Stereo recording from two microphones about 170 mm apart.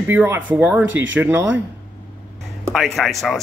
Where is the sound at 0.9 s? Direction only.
90° right.